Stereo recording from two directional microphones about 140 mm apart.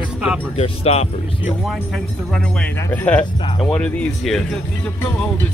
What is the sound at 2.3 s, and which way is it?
Speech, 10° left (ahead or behind).